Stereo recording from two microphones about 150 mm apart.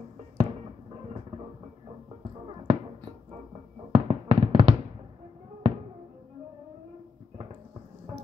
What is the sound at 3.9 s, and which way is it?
Fireworks, 45° right (ahead or behind).